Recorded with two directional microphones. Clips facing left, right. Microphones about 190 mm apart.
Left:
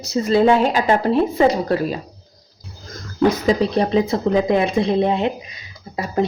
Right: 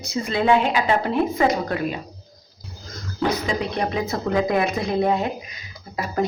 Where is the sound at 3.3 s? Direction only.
35° left (ahead or behind).